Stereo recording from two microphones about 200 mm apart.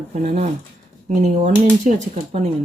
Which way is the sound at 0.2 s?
35° right (ahead or behind).